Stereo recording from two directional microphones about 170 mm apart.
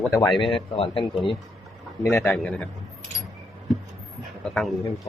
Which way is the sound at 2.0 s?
15° left (ahead or behind).